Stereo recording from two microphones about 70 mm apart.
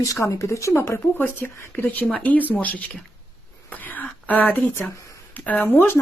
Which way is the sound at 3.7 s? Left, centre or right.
Left.